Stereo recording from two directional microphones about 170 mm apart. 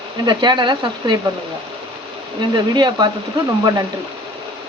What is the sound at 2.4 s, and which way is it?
Speech, 25° right (ahead or behind).